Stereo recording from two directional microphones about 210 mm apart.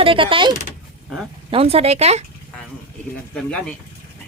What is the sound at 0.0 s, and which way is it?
Speech, 25° right (ahead or behind).